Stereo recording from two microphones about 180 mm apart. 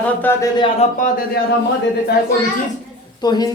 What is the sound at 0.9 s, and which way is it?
Speech, 45° left (ahead or behind).